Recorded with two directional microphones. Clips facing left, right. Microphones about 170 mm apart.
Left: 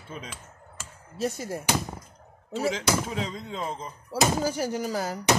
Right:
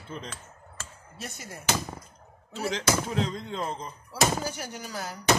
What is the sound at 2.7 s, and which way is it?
Speech, 5° left (ahead or behind).